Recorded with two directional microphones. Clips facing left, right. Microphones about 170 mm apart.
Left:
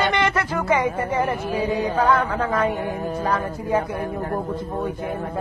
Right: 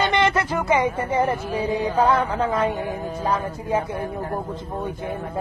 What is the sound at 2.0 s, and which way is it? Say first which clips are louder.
A woman's voice: even; 25° right (ahead or behind).